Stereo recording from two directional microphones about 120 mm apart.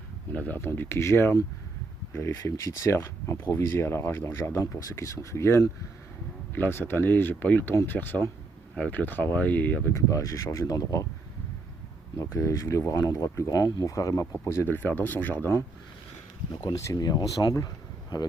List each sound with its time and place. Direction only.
0.3 s speech: 15° left (ahead or behind)
12.1 s speech: 25° left (ahead or behind)
16.6 s speech: 30° left (ahead or behind)